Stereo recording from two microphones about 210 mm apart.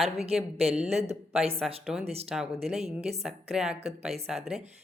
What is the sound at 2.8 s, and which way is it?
Speech, 30° right (ahead or behind).